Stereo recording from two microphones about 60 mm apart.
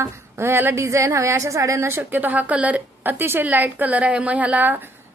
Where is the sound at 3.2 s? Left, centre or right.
Right.